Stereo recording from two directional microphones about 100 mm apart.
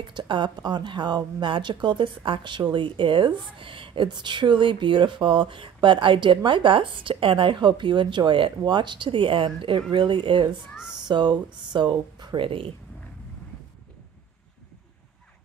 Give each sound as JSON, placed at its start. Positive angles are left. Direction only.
{"t": 0.0, "sound": "speech", "side_deg": -50}
{"t": 12.4, "sound": "speech", "side_deg": -65}